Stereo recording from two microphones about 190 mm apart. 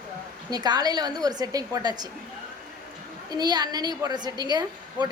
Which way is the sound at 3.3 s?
20° right (ahead or behind).